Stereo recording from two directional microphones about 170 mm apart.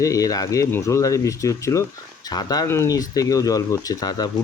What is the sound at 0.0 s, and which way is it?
Speech, 20° left (ahead or behind).